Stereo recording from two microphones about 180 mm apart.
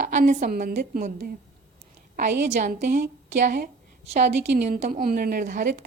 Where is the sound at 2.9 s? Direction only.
70° right (ahead or behind).